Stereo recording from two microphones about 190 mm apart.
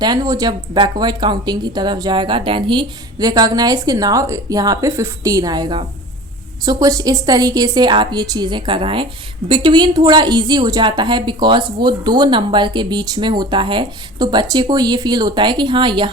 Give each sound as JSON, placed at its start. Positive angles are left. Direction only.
{"t": 0.0, "sound": "a woman's voice", "side_deg": -20}